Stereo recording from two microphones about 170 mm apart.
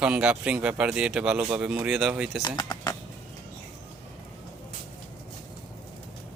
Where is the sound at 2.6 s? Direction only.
25° left (ahead or behind).